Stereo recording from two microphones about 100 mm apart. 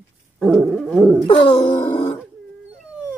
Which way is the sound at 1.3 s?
65° left (ahead or behind).